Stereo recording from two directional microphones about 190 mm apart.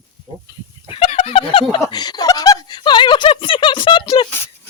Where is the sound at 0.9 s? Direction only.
30° left (ahead or behind).